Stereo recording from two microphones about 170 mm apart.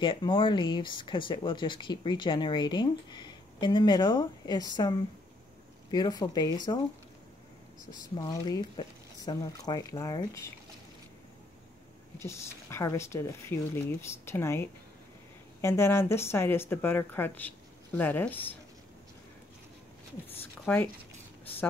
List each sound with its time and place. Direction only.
0.0 s speech: 30° left (ahead or behind)
7.9 s speech: 25° left (ahead or behind)
12.2 s speech: 15° left (ahead or behind)
20.6 s speech: 10° left (ahead or behind)